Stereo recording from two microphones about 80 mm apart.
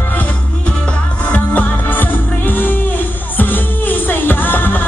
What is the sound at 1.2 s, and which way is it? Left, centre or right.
Music, centre.